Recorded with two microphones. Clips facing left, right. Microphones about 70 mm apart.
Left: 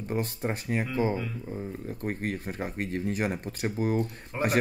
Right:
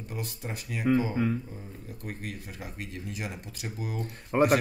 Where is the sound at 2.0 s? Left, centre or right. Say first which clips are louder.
Left 7 dB; left.